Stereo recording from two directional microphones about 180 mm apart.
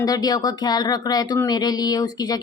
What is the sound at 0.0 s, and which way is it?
Speech, 20° left (ahead or behind).